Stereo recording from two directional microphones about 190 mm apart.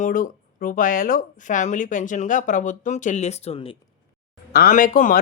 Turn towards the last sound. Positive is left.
turn(degrees=45)  # may be behind; listen again after turning